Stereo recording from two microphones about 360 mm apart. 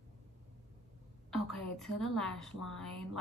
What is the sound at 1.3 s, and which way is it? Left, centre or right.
A woman's voice, centre.